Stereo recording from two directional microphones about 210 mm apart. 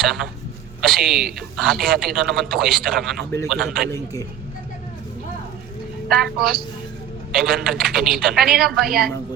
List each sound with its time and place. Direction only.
0.0 s a woman's voice: centre (ahead or behind)
3.9 s a man's voice: 15° left (ahead or behind)
6.1 s a woman's voice: centre (ahead or behind)